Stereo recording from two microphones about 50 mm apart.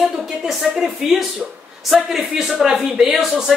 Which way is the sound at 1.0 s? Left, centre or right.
Centre.